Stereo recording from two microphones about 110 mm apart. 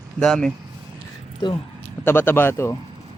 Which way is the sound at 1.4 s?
40° left (ahead or behind).